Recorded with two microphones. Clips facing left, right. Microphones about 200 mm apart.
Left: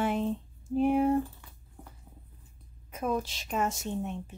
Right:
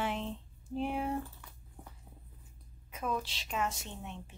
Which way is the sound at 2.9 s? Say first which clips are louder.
Left 5 dB; 45° left (ahead or behind).